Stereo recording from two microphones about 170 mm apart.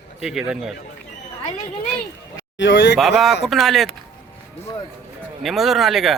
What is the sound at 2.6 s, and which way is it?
Speech, 90° left.